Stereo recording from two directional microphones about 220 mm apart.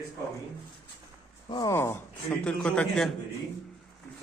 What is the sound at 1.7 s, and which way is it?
Speech, 10° left (ahead or behind).